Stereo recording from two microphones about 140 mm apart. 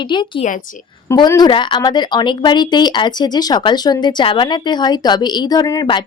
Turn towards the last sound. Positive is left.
turn(degrees=30)  # may be behind; listen again after turning